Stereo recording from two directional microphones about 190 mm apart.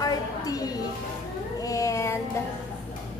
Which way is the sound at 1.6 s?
15° left (ahead or behind).